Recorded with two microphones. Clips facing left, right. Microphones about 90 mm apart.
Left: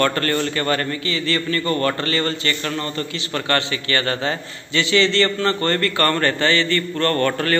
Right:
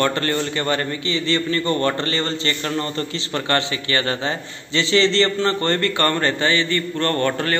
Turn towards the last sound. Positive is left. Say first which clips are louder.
# left 1 dB
turn(degrees=-20)  # may be behind; listen again after turning